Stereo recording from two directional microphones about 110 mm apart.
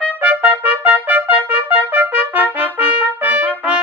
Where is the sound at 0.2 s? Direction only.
15° right (ahead or behind).